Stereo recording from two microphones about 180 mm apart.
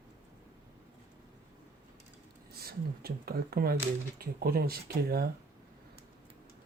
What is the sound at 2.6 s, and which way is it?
Speech, 60° right (ahead or behind).